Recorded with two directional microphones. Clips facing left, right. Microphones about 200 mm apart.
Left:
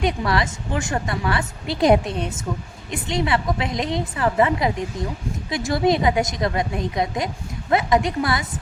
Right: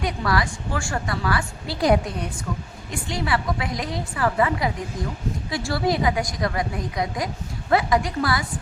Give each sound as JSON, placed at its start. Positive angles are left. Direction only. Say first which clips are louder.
{"t": 0.0, "sound": "a woman's voice", "louder": "left 2 dB", "side_deg": 20}